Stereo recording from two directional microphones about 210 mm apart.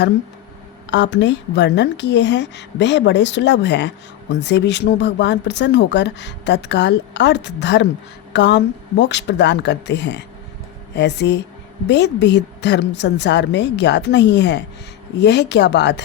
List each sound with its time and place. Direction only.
0.9 s a woman's voice: 55° left (ahead or behind)